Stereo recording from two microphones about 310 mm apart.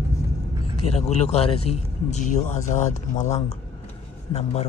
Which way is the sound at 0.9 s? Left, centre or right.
Left.